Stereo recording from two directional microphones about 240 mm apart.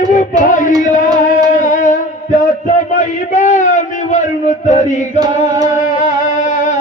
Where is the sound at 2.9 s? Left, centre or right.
Left.